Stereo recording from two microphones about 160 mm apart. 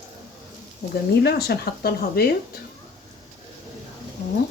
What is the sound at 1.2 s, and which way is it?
Speech, 80° left.